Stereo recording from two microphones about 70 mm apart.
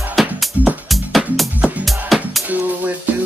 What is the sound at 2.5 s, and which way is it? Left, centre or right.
Music, right.